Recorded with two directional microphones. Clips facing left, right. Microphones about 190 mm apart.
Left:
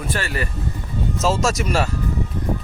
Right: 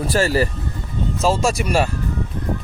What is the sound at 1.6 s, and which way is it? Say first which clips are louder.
Speech: right 1 dB; 15° right (ahead or behind).